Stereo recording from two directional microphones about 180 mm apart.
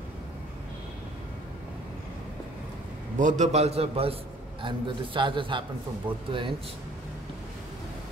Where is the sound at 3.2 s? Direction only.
40° right (ahead or behind).